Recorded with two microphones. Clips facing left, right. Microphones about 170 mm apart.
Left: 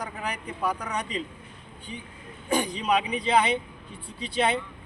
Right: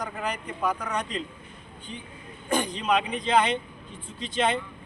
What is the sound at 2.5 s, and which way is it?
A man's voice, 10° left (ahead or behind).